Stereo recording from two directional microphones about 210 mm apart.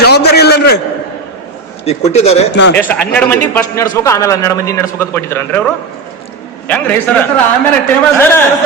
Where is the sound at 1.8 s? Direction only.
30° left (ahead or behind).